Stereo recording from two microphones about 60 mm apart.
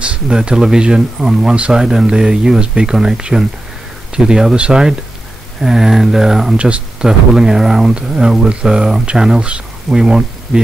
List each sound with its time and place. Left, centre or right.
0.0 s speech: centre
6.5 s speech: centre